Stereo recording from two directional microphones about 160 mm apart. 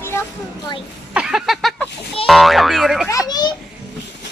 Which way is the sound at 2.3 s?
Centre (ahead or behind).